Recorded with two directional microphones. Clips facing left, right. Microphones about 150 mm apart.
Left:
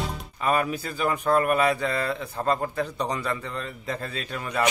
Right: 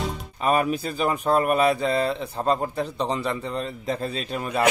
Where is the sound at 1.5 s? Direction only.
30° right (ahead or behind).